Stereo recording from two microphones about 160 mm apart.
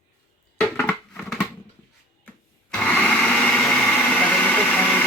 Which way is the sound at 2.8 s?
5° left (ahead or behind).